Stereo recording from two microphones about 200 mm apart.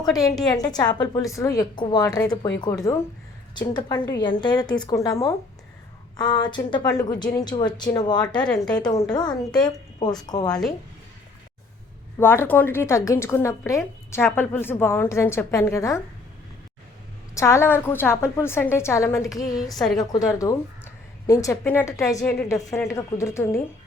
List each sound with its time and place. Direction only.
0.0 s speech: 15° left (ahead or behind)
0.3 s speech: centre (ahead or behind)
0.6 s a woman's voice: 20° left (ahead or behind)
8.3 s speech: 5° left (ahead or behind)
8.7 s a woman's voice: 20° left (ahead or behind)
12.2 s speech: 10° left (ahead or behind)
17.3 s speech: 15° left (ahead or behind)
20.4 s speech: 15° left (ahead or behind)